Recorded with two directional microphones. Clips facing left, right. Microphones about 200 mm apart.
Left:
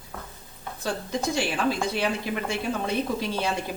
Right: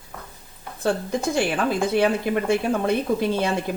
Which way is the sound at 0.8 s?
55° right (ahead or behind).